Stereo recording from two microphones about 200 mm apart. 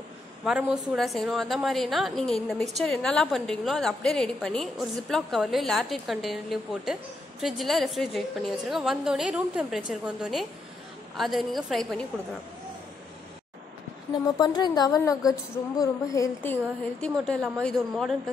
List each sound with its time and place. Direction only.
0.5 s a woman's voice: 5° right (ahead or behind)
14.2 s a woman's voice: 20° left (ahead or behind)
17.0 s a woman's voice: 5° left (ahead or behind)